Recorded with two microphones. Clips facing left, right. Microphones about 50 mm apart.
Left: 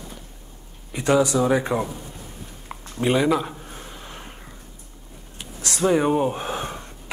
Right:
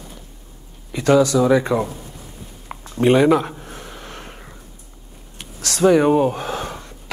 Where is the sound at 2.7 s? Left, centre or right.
Centre.